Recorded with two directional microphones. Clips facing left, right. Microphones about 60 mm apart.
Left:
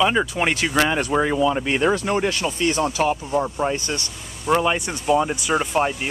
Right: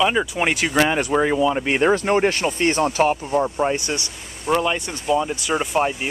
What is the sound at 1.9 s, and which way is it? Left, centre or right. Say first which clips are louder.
Speech: right 3 dB; right.